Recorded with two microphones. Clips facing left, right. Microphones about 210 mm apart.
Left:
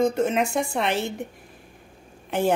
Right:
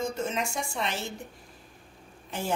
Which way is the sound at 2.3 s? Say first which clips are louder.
Left 9 dB; 60° left (ahead or behind).